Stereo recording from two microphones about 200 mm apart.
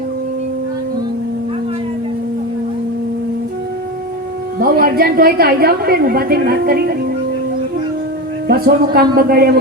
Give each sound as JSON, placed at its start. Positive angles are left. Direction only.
{"t": 4.6, "sound": "a woman's voice", "side_deg": -45}
{"t": 8.4, "sound": "a woman's voice", "side_deg": -50}